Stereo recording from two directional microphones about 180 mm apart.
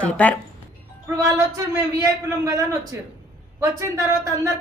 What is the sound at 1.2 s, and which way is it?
A man's voice, 20° right (ahead or behind).